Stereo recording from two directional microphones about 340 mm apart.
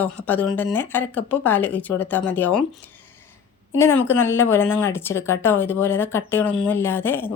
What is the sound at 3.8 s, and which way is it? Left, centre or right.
Speech, centre.